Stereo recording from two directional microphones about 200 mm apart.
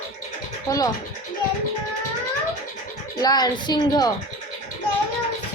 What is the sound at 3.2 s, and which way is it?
Speech, 20° left (ahead or behind).